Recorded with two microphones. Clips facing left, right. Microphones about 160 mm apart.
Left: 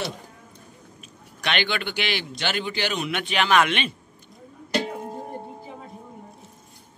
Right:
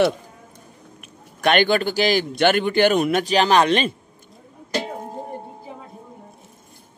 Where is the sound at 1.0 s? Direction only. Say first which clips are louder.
Right 10 dB; 50° right (ahead or behind).